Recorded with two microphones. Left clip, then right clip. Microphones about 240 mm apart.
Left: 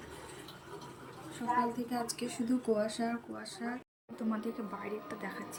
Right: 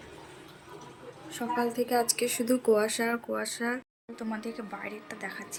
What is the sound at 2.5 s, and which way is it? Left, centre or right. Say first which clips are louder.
Speech: right 7 dB; right.